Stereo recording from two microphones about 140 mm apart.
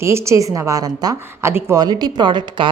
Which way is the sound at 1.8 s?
30° right (ahead or behind).